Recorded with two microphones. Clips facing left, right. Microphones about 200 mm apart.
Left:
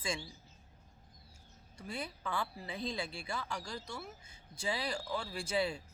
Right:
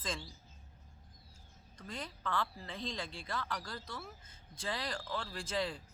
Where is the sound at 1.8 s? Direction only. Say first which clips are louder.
Left 3 dB; 10° left (ahead or behind).